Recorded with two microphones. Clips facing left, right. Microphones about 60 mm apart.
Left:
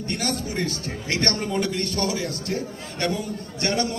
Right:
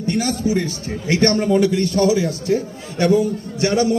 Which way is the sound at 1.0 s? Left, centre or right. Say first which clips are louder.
Right 9 dB; right.